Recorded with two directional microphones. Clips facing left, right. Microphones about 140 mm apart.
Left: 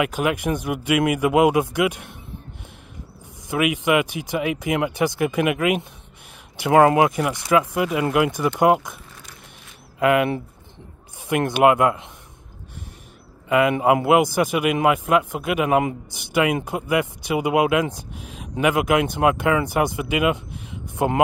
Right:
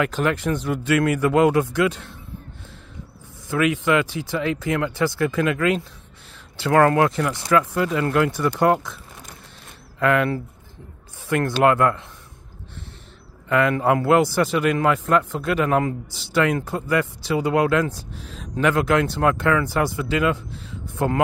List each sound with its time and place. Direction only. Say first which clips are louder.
0.0 s a man's voice: even; 10° left (ahead or behind)
3.4 s a man's voice: even; 15° left (ahead or behind)
9.9 s a man's voice: left 1 dB; 15° left (ahead or behind)
13.5 s a man's voice: left 2 dB; 15° left (ahead or behind)